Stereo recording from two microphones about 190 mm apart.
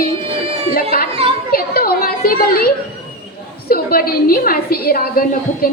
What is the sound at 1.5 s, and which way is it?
Children playing, 50° left (ahead or behind).